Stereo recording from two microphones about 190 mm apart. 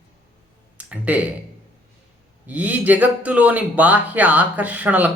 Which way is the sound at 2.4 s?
10° right (ahead or behind).